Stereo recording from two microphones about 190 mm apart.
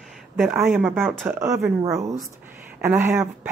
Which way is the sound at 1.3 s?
15° right (ahead or behind).